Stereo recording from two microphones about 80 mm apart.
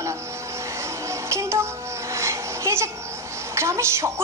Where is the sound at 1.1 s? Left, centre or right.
Right.